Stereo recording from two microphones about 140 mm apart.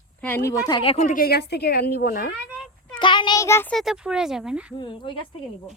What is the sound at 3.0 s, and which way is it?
Child singing, 35° left (ahead or behind).